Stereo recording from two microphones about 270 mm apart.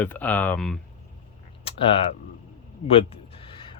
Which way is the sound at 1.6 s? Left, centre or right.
Centre.